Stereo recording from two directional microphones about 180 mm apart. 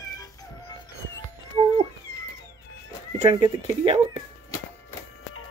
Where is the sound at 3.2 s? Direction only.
30° right (ahead or behind).